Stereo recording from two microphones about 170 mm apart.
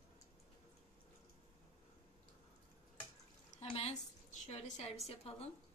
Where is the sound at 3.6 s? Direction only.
35° left (ahead or behind).